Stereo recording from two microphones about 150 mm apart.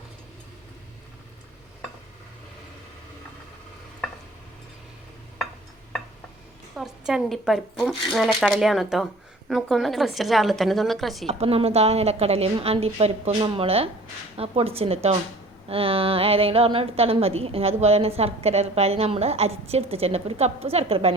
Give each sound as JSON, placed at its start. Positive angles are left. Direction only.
{"t": 6.7, "sound": "speech", "side_deg": -5}
{"t": 11.3, "sound": "a woman's voice", "side_deg": -40}